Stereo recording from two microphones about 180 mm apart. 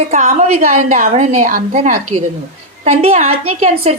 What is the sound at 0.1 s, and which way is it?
Speech, 40° right (ahead or behind).